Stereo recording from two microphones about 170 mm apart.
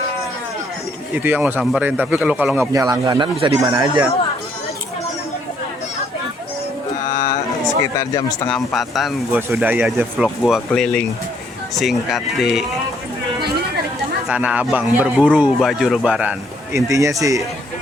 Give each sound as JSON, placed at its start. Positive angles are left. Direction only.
{"t": 1.1, "sound": "speech", "side_deg": -10}
{"t": 2.7, "sound": "speech", "side_deg": -25}
{"t": 7.1, "sound": "a sound", "side_deg": 20}
{"t": 8.4, "sound": "speech", "side_deg": 0}
{"t": 14.3, "sound": "speech", "side_deg": -10}
{"t": 16.7, "sound": "speech", "side_deg": -20}